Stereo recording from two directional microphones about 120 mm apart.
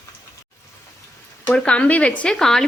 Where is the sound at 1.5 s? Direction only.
10° left (ahead or behind).